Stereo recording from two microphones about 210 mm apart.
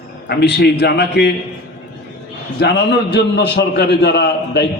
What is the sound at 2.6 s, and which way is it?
A man's voice, 55° left (ahead or behind).